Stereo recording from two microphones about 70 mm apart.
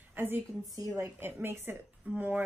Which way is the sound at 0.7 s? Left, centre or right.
Right.